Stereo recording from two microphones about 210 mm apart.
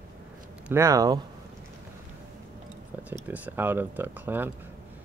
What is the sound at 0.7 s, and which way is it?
Speech, 15° right (ahead or behind).